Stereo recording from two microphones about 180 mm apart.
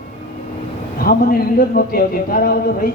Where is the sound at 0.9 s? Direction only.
55° left (ahead or behind).